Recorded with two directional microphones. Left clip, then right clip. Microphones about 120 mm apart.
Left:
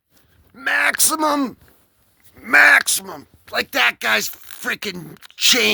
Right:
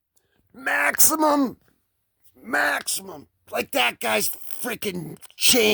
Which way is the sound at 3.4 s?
45° right (ahead or behind).